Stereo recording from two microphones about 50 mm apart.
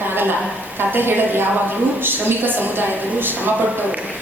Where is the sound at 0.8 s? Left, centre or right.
Right.